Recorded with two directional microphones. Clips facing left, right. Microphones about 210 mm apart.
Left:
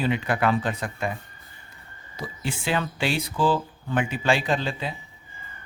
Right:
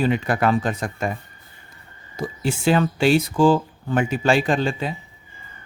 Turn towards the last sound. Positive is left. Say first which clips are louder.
# right 5 dB
turn(degrees=-50)  # may be behind; listen again after turning